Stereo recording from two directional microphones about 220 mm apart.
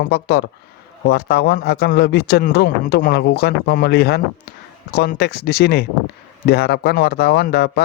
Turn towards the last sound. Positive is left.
turn(degrees=45)  # may be behind; listen again after turning